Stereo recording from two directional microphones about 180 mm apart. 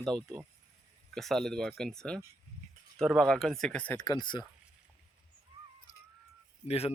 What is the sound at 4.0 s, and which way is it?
Speech, 20° left (ahead or behind).